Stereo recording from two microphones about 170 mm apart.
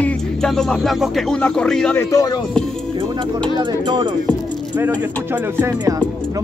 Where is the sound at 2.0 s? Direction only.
20° left (ahead or behind).